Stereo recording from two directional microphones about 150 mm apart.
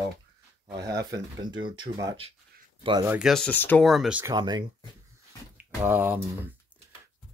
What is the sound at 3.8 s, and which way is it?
Speech, centre (ahead or behind).